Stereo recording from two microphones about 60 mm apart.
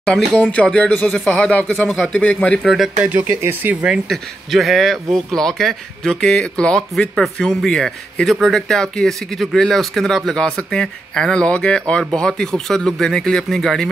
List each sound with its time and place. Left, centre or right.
0.4 s speech: left
1.8 s speech: centre
2.6 s speech: centre
3.1 s speech: right
4.1 s speech: centre